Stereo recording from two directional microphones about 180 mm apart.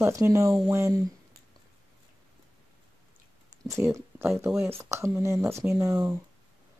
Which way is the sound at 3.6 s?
15° right (ahead or behind).